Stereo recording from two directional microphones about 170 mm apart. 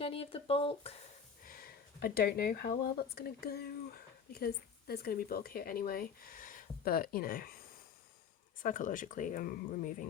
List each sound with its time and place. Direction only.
0.0 s speech: 35° left (ahead or behind)
1.5 s speech: 60° left (ahead or behind)
8.5 s speech: 50° left (ahead or behind)